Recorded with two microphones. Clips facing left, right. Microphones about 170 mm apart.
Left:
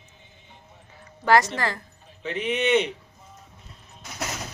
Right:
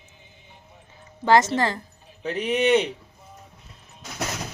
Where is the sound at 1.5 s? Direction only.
25° right (ahead or behind).